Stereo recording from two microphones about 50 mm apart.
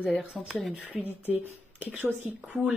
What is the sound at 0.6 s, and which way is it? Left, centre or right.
Speech, centre.